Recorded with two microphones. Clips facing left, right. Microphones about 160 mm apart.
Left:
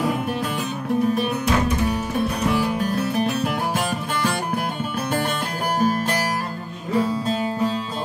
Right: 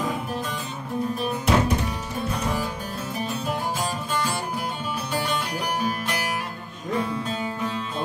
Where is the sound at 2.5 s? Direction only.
70° left (ahead or behind).